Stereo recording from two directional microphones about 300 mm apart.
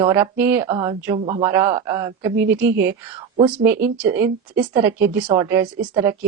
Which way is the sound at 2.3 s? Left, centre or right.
Right.